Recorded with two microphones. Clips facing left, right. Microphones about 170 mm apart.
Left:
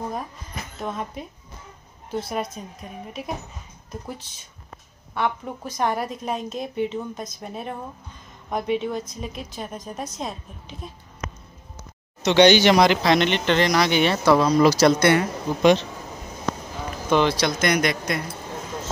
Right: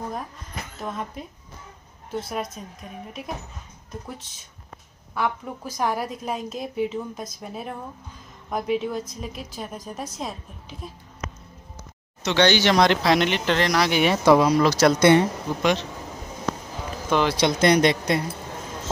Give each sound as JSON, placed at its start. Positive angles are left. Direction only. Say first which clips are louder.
{"t": 0.7, "sound": "a woman's voice", "louder": "left 2 dB", "side_deg": 0}
{"t": 5.1, "sound": "a woman's voice", "louder": "left 1 dB", "side_deg": 0}
{"t": 12.2, "sound": "speech", "louder": "left 5 dB", "side_deg": 15}
{"t": 12.8, "sound": "a woman's voice", "louder": "left 1 dB", "side_deg": 0}
{"t": 14.6, "sound": "a woman's voice", "louder": "left 2 dB", "side_deg": 5}
{"t": 15.0, "sound": "speech", "louder": "right 3 dB", "side_deg": -20}
{"t": 17.1, "sound": "a woman's voice", "louder": "left 2 dB", "side_deg": -5}
{"t": 17.4, "sound": "speech", "louder": "right 3 dB", "side_deg": -30}